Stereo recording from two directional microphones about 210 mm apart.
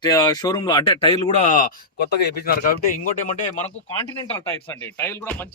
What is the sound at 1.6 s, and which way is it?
Speech, 45° left (ahead or behind).